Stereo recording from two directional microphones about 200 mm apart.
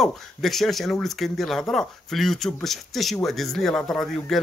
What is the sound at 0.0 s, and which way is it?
Speech, centre (ahead or behind).